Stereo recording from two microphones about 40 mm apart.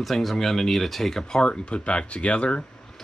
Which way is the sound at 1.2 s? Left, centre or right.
Left.